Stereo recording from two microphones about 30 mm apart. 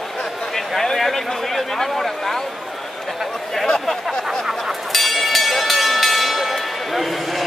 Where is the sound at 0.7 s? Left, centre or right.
Centre.